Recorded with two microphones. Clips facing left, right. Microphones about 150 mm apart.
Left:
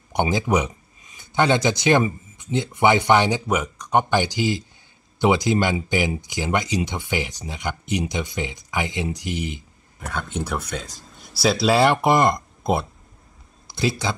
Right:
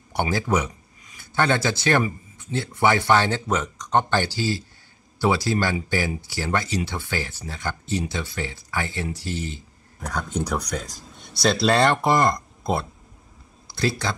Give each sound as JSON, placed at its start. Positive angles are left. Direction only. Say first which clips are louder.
{"t": 0.1, "sound": "speech", "louder": "left 2 dB", "side_deg": 15}
{"t": 9.9, "sound": "speech", "louder": "right 1 dB", "side_deg": 0}
{"t": 12.1, "sound": "speech", "louder": "left 2 dB", "side_deg": 20}
{"t": 13.7, "sound": "a sound", "louder": "left 1 dB", "side_deg": 20}